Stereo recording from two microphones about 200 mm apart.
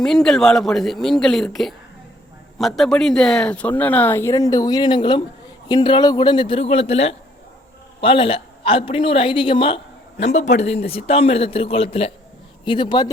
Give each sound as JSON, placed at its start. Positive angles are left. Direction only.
{"t": 0.0, "sound": "speech", "side_deg": 0}
{"t": 2.6, "sound": "a man's voice", "side_deg": 0}